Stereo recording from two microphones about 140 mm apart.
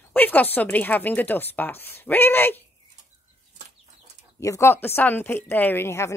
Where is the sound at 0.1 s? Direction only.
10° left (ahead or behind).